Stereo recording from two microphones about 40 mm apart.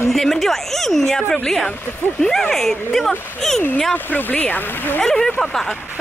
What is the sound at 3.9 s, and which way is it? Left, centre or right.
Speech, left.